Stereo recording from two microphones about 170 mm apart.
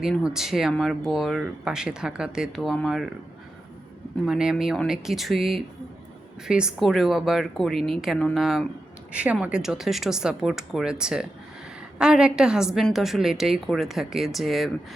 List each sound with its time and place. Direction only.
0.0 s speech: 5° right (ahead or behind)
4.3 s speech: 5° right (ahead or behind)